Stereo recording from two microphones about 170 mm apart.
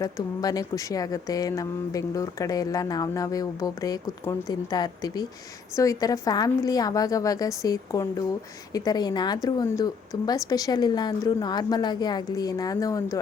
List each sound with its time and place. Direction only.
0.0 s speech: 20° left (ahead or behind)